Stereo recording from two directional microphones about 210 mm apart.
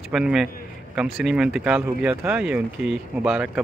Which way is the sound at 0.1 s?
5° right (ahead or behind).